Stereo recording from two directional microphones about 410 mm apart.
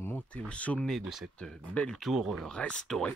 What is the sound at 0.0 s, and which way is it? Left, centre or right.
Speech, centre.